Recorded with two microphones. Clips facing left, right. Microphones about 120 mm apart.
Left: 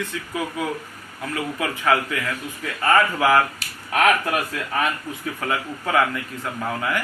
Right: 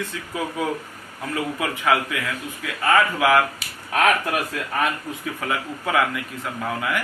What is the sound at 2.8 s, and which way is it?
A man's voice, centre (ahead or behind).